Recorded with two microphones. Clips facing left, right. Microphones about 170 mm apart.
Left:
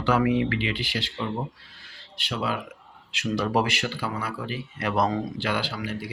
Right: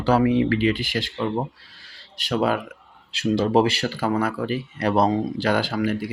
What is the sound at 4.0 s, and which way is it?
Speech, 45° right (ahead or behind).